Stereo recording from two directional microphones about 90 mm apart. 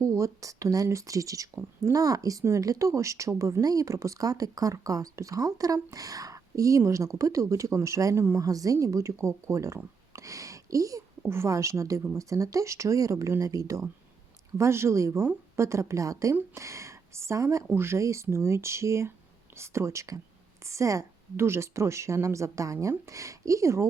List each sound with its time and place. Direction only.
0.0 s speech: 35° right (ahead or behind)